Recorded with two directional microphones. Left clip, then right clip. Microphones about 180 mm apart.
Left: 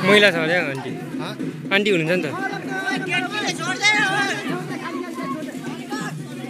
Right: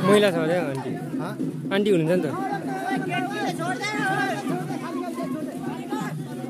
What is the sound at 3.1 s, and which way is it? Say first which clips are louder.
Music: left 3 dB; 65° right (ahead or behind).